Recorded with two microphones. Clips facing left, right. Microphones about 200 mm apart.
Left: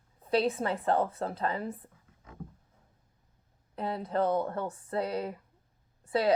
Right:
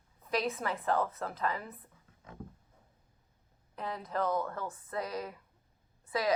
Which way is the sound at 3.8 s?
30° left (ahead or behind).